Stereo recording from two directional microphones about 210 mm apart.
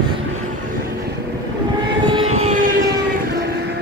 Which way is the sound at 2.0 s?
25° right (ahead or behind).